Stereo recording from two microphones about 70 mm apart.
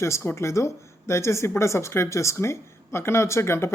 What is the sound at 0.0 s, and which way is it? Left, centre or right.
A man's voice, left.